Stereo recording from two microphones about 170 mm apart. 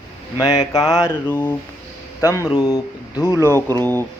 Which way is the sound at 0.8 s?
5° right (ahead or behind).